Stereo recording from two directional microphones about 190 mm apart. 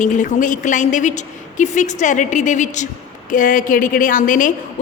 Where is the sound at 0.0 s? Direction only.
40° left (ahead or behind).